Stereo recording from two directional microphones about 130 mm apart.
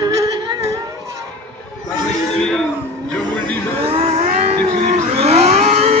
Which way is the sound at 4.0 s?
60° right (ahead or behind).